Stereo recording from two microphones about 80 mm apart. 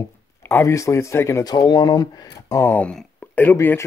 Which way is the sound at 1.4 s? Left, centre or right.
Left.